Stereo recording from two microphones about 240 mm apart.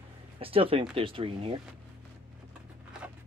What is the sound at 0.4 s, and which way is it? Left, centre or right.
Speech, right.